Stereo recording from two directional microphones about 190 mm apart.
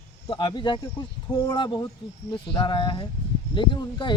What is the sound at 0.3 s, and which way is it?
Speech, 25° left (ahead or behind).